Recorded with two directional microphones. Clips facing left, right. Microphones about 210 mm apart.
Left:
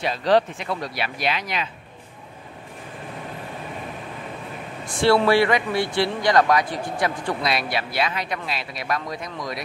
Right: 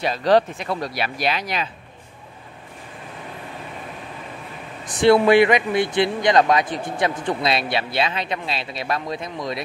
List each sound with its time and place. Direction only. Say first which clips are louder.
0.0 s speech: right 2 dB; 40° right (ahead or behind)
4.8 s speech: right 3 dB; 20° right (ahead or behind)